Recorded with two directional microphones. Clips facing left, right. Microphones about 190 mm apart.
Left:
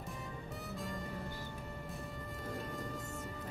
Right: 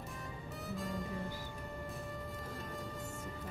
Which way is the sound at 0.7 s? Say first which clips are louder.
Right 3 dB; centre (ahead or behind).